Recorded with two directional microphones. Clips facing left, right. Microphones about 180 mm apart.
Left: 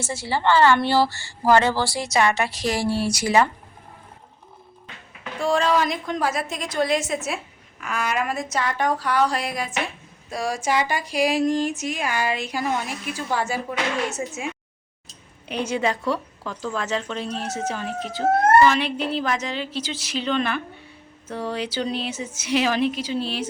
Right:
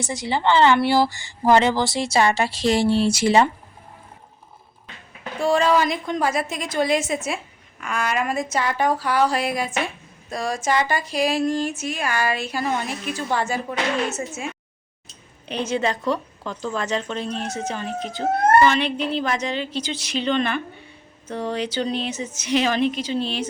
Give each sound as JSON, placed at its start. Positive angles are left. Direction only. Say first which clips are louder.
{"t": 0.0, "sound": "a woman's voice", "louder": "right 1 dB", "side_deg": -15}
{"t": 5.4, "sound": "a woman's voice", "louder": "right 2 dB", "side_deg": 0}